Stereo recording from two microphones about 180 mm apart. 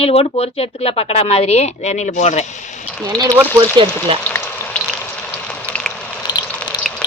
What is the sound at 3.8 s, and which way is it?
Speech, 25° right (ahead or behind).